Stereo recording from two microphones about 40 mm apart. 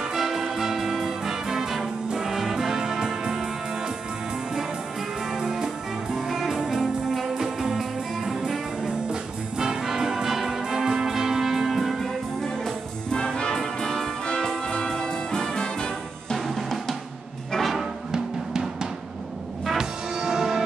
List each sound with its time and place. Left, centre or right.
0.0 s music: centre
5.3 s music: centre
13.1 s music: left
16.4 s drum: centre
17.6 s music: centre
18.1 s music: centre